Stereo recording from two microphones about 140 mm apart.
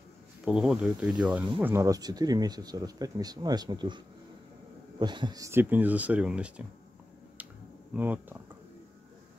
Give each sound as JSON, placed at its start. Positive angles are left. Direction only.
{"t": 0.5, "sound": "speech", "side_deg": -5}
{"t": 7.9, "sound": "speech", "side_deg": -15}